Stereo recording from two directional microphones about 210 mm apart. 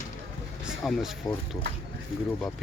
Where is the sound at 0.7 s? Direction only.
Centre (ahead or behind).